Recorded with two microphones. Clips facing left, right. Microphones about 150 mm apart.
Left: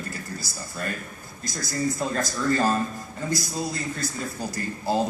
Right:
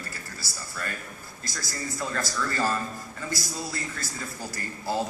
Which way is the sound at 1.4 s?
20° left (ahead or behind).